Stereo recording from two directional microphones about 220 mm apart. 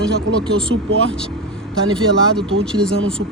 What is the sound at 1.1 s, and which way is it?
Vehicle, 5° left (ahead or behind).